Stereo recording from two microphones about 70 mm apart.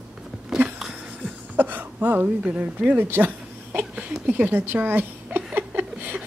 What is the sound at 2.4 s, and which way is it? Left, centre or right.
Speech, centre.